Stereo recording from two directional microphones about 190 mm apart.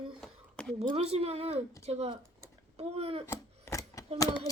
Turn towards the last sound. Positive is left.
turn(degrees=20)  # may be behind; listen again after turning